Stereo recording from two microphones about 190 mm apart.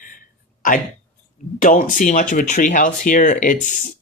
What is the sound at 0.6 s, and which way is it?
Speech, 45° left (ahead or behind).